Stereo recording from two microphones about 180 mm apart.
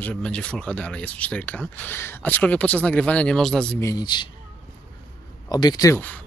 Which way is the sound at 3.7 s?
20° left (ahead or behind).